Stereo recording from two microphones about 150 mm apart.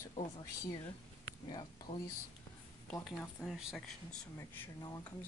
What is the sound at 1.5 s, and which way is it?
Speech, 30° left (ahead or behind).